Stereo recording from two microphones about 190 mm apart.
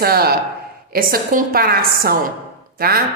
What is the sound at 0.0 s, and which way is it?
A woman's voice, 55° right (ahead or behind).